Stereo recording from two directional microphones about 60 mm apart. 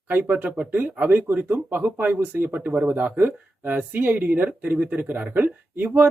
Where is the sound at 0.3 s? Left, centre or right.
Right.